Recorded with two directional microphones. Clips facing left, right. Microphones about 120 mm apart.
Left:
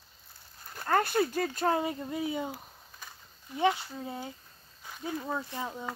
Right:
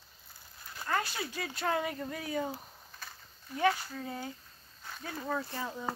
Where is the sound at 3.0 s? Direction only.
15° left (ahead or behind).